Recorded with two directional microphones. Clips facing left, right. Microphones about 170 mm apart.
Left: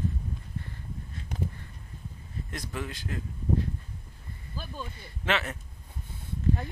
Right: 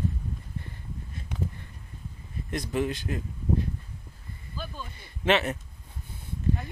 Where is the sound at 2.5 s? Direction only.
20° right (ahead or behind).